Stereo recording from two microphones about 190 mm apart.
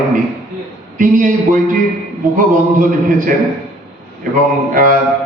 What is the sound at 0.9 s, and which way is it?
Speech, 45° right (ahead or behind).